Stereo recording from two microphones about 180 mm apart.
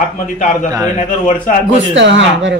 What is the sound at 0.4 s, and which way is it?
Speech, 45° left (ahead or behind).